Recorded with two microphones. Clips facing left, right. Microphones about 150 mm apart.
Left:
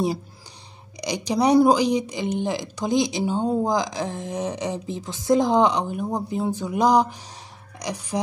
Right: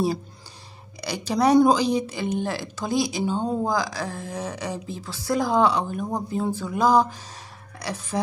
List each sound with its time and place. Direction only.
1.0 s speech: 15° left (ahead or behind)